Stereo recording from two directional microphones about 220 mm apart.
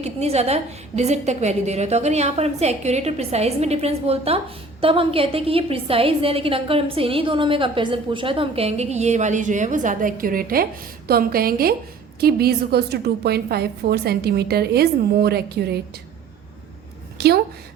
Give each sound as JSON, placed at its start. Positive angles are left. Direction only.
{"t": 0.0, "sound": "a woman's voice", "side_deg": -30}
{"t": 17.2, "sound": "a woman's voice", "side_deg": -45}